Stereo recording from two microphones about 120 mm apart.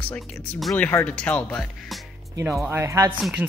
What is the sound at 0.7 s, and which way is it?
Speech, 15° left (ahead or behind).